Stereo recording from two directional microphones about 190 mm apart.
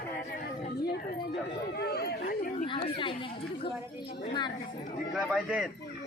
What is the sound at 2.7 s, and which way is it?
A woman's voice, 25° left (ahead or behind).